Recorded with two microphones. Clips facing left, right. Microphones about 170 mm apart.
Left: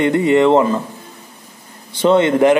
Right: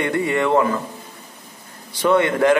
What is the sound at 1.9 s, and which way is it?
Speech, 25° left (ahead or behind).